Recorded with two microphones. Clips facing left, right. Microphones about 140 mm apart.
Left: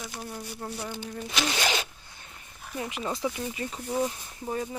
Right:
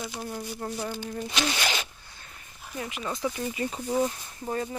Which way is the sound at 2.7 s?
25° left (ahead or behind).